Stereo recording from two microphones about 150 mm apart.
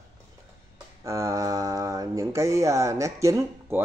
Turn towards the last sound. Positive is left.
turn(degrees=-20)  # may be behind; listen again after turning